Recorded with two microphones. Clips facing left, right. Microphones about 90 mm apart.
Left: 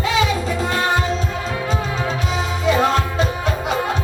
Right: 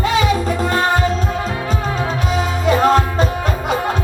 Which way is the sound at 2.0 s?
45° right (ahead or behind).